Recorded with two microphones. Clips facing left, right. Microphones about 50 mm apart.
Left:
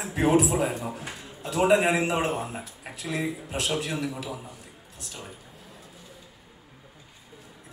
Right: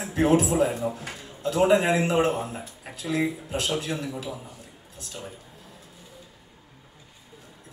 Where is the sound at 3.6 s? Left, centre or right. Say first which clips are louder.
Even; centre.